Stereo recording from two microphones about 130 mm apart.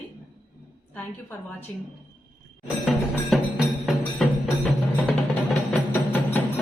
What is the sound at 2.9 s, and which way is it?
Music, centre (ahead or behind).